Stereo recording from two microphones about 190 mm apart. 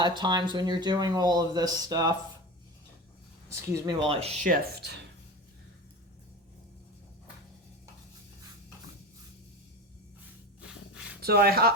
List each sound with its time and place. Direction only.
0.0 s speech: 25° right (ahead or behind)
3.5 s speech: 20° right (ahead or behind)
4.1 s speech: 35° right (ahead or behind)
4.4 s speech: 50° right (ahead or behind)
10.6 s a sound: 5° right (ahead or behind)
11.2 s speech: 55° right (ahead or behind)